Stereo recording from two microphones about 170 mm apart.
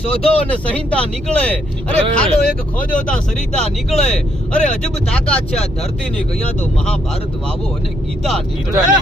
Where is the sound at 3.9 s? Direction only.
40° left (ahead or behind).